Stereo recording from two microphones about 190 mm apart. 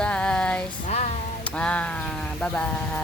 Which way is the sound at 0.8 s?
40° left (ahead or behind).